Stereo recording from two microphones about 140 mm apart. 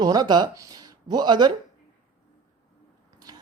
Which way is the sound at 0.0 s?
30° right (ahead or behind).